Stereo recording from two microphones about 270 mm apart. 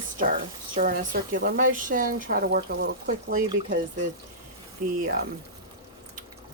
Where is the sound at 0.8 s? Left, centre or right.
Right.